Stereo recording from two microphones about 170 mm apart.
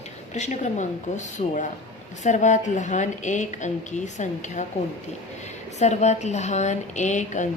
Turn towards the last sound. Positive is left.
turn(degrees=45)  # may be behind; listen again after turning